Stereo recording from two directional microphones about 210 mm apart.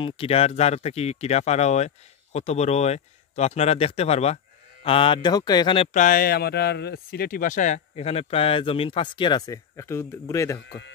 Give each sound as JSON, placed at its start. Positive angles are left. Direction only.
{"t": 0.0, "sound": "speech", "side_deg": 25}
{"t": 5.9, "sound": "speech", "side_deg": 40}